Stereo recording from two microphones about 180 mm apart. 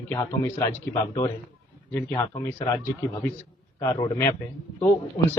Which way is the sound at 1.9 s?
15° left (ahead or behind).